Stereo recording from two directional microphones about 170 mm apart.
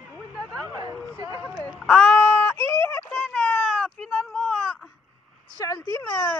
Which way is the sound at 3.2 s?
5° left (ahead or behind).